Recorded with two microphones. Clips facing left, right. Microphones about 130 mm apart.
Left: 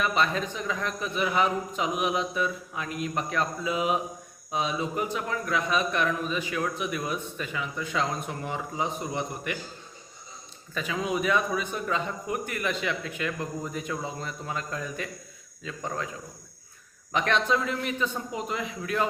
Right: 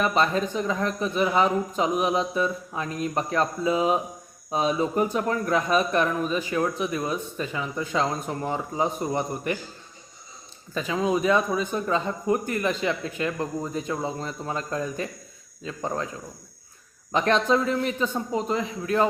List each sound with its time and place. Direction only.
0.0 s speech: 40° right (ahead or behind)
10.8 s speech: 30° right (ahead or behind)
17.1 s speech: 35° right (ahead or behind)